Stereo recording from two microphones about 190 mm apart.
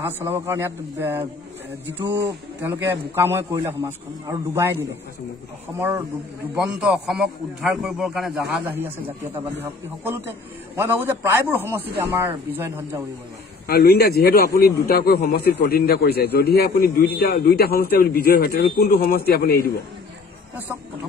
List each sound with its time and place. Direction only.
0.2 s a man's voice: 15° right (ahead or behind)
5.8 s a man's voice: 10° right (ahead or behind)
13.7 s a man's voice: 55° left (ahead or behind)